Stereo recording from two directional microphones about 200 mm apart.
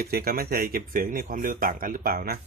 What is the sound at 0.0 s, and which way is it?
Speech, 50° right (ahead or behind).